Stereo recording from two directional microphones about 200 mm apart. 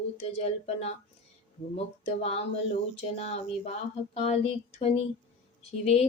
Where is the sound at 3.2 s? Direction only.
30° left (ahead or behind).